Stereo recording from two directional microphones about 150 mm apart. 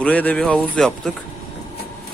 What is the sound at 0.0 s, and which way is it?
Speech, 10° left (ahead or behind).